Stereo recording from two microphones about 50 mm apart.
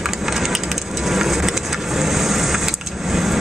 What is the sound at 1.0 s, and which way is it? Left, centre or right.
Vehicle, centre.